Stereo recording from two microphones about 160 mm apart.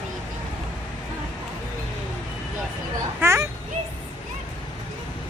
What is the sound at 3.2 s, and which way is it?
Speech, 15° right (ahead or behind).